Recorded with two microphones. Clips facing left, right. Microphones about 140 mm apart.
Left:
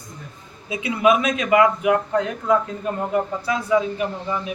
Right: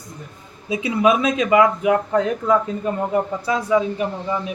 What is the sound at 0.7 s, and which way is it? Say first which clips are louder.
Speech: right 1 dB; 30° right (ahead or behind).